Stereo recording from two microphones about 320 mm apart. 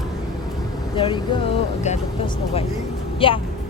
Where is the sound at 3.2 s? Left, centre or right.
Centre.